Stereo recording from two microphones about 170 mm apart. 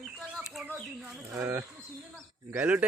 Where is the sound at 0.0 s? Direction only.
Centre (ahead or behind).